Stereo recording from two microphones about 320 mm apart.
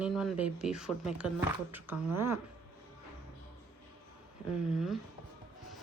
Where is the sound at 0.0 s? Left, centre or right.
Centre.